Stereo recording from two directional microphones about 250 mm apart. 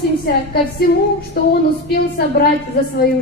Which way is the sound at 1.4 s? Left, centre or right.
Left.